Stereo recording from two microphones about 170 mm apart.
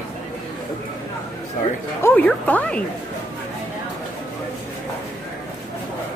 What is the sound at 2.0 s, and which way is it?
Speech, 10° left (ahead or behind).